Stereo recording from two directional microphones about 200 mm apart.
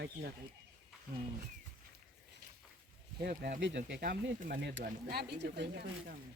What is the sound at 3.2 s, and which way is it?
Speech, 45° right (ahead or behind).